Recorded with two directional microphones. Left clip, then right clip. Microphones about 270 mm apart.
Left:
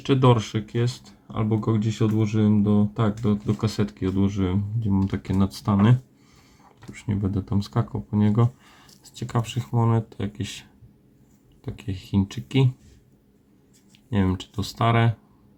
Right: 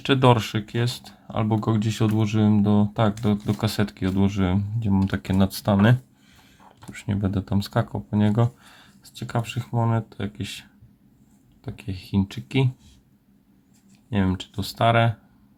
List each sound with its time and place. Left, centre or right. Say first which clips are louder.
0.0 s speech: right 2 dB; centre
14.1 s speech: even; centre